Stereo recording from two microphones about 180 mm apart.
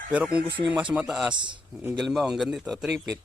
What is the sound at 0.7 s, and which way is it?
Speech, 5° right (ahead or behind).